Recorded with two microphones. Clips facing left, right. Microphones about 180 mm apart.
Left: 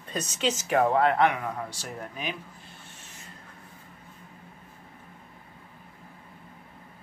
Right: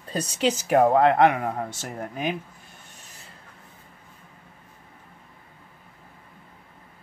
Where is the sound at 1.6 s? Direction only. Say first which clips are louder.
Right 4 dB; 50° right (ahead or behind).